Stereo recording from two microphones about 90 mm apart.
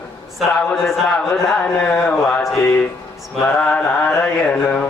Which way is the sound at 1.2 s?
5° left (ahead or behind).